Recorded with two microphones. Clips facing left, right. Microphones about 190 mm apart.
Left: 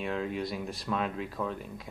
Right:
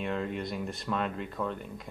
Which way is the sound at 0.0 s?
Centre (ahead or behind).